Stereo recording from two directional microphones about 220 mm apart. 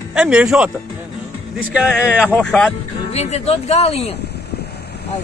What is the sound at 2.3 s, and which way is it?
Speech, 5° left (ahead or behind).